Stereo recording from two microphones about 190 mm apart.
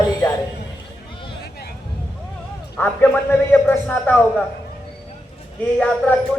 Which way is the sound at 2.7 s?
10° left (ahead or behind).